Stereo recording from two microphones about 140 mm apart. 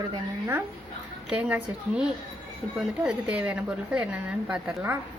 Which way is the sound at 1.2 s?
5° right (ahead or behind).